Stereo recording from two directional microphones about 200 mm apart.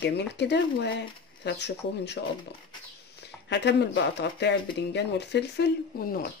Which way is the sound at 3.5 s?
60° left (ahead or behind).